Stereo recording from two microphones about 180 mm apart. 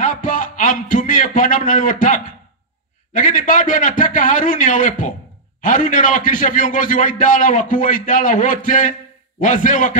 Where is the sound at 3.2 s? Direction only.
45° left (ahead or behind).